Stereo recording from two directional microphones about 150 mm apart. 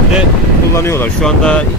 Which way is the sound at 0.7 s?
15° left (ahead or behind).